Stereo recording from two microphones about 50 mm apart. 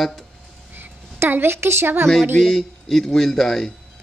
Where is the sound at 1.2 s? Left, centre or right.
Right.